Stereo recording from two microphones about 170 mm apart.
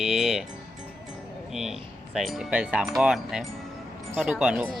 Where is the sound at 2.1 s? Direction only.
Centre (ahead or behind).